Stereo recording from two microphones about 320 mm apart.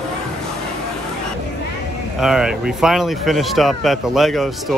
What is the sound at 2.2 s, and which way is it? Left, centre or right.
Speech, centre.